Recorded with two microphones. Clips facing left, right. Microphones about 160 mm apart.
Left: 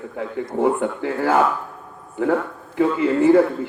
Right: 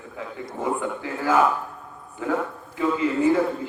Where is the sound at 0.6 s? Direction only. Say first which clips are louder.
Left 5 dB; 60° left (ahead or behind).